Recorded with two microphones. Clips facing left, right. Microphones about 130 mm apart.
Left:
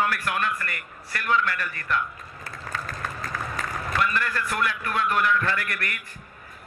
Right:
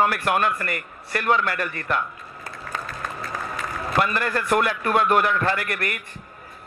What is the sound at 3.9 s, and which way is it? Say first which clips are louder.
A man's voice: right 4 dB; 35° right (ahead or behind).